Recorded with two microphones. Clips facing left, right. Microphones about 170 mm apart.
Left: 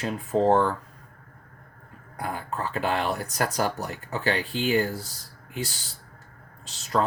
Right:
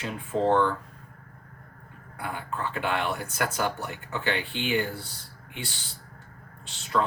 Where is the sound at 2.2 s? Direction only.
40° left (ahead or behind).